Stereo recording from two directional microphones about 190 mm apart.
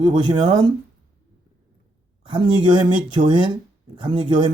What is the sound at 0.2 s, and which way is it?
Speech, 20° right (ahead or behind).